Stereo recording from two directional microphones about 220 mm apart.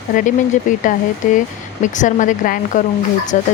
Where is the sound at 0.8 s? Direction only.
35° left (ahead or behind).